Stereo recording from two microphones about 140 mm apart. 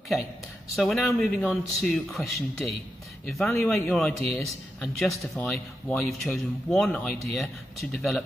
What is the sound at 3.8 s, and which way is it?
Speech, 5° left (ahead or behind).